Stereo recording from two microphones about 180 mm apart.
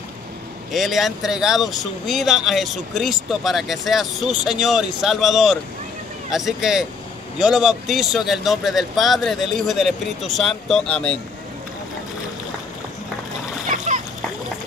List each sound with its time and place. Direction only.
0.7 s speech: centre (ahead or behind)
13.7 s splash: 45° right (ahead or behind)